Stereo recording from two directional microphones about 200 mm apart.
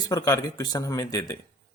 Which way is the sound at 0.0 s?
20° left (ahead or behind).